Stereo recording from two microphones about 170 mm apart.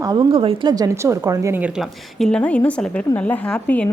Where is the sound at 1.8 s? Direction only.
5° left (ahead or behind).